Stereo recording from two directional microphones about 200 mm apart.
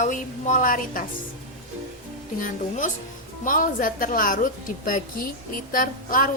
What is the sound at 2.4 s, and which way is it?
A woman's voice, 40° left (ahead or behind).